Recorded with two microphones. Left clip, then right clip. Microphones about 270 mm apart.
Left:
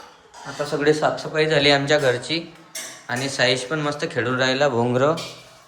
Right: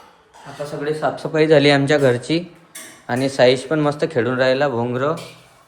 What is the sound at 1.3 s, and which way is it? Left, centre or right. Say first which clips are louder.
Speech: right 5 dB; right.